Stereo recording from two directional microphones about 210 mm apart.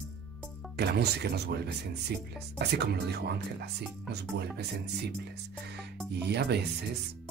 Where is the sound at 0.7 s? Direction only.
50° right (ahead or behind).